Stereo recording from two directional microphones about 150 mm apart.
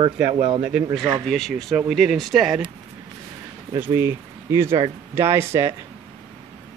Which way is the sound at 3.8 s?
15° right (ahead or behind).